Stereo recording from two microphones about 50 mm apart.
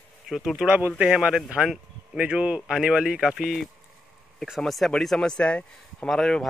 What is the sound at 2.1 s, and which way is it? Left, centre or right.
Speech, right.